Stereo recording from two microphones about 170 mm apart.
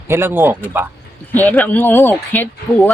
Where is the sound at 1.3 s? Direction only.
10° left (ahead or behind).